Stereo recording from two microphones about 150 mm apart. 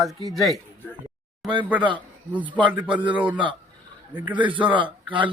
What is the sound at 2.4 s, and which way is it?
Speech, 35° right (ahead or behind).